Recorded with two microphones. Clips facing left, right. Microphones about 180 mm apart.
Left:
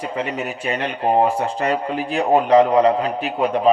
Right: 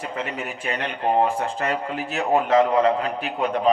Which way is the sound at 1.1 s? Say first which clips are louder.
Left 4 dB; 35° left (ahead or behind).